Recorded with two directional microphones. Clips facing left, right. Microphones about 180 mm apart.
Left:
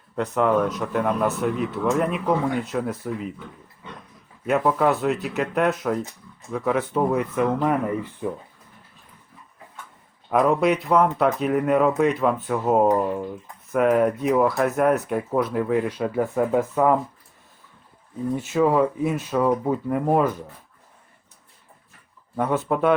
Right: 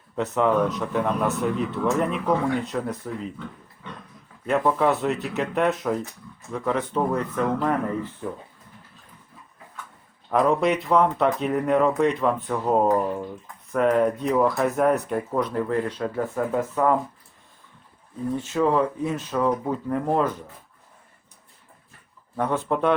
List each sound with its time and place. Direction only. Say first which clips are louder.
0.2 s speech: left 1 dB; centre (ahead or behind)
4.4 s speech: left 1 dB; 5° left (ahead or behind)
10.2 s speech: left 1 dB; 5° left (ahead or behind)
18.3 s speech: left 2 dB; 10° left (ahead or behind)
22.4 s speech: left 2 dB; 5° left (ahead or behind)